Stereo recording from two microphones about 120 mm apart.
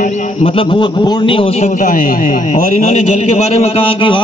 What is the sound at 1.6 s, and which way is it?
A man's voice, 90° left.